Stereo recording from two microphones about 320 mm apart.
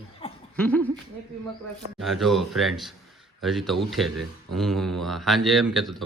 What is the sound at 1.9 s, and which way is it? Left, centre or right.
Speech, centre.